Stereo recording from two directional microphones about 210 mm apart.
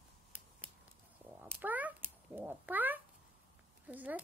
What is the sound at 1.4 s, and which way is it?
Speech, 10° right (ahead or behind).